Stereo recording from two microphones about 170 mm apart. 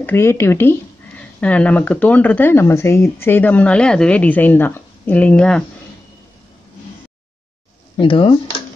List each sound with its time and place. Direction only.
0.0 s speech: 15° left (ahead or behind)
8.0 s speech: 30° left (ahead or behind)